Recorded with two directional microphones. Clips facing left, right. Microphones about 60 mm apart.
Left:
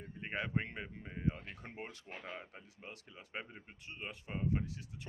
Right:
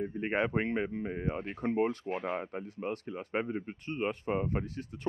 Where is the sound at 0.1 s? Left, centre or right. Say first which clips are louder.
Right 4 dB; right.